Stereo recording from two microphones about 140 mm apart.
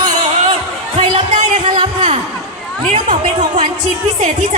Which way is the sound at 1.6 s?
35° right (ahead or behind).